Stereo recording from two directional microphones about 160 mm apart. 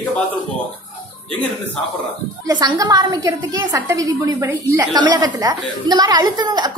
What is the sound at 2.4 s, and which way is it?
A woman's voice, 25° right (ahead or behind).